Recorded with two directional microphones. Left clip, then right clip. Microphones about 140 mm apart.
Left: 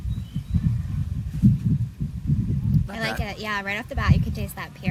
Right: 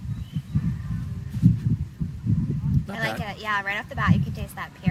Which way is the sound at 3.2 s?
25° left (ahead or behind).